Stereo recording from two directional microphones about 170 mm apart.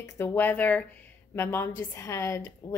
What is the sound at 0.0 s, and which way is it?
A woman's voice, 15° left (ahead or behind).